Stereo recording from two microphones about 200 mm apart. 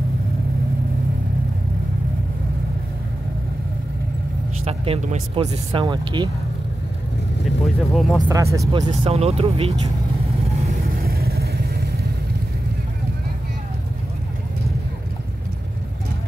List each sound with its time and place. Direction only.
4.6 s speech: 30° right (ahead or behind)
5.7 s speech: 25° right (ahead or behind)
7.4 s speech: centre (ahead or behind)
8.3 s speech: 15° right (ahead or behind)
11.0 s vehicle: 50° right (ahead or behind)